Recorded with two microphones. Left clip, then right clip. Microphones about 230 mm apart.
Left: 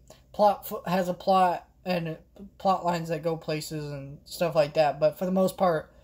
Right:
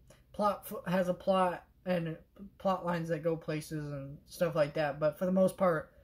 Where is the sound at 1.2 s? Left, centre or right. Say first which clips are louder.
Left 7 dB; centre.